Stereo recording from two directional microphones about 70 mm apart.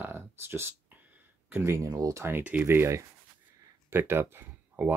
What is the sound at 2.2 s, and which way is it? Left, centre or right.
Speech, right.